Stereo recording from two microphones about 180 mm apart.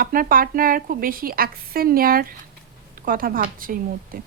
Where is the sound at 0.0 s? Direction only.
50° right (ahead or behind).